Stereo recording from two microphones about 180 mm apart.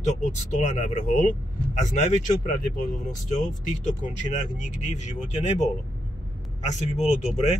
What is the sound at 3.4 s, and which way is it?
Speech, 45° left (ahead or behind).